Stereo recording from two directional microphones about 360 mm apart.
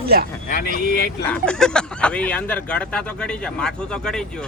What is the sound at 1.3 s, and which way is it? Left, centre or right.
Speech, centre.